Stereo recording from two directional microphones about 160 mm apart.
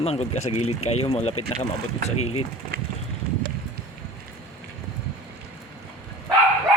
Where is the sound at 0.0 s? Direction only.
40° left (ahead or behind).